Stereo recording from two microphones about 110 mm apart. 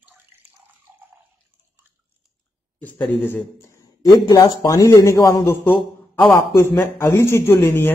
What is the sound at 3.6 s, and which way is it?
Speech, 35° left (ahead or behind).